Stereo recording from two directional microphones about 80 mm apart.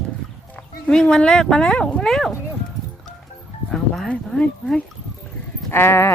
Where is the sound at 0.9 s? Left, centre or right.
Centre.